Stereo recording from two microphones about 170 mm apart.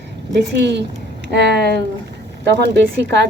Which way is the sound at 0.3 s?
85° right.